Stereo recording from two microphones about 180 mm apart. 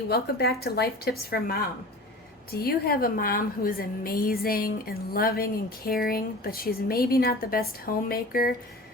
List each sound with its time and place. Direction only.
0.1 s a woman's voice: 60° left (ahead or behind)